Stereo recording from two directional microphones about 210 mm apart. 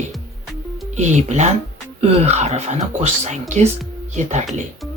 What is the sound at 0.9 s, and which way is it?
Speech, 35° right (ahead or behind).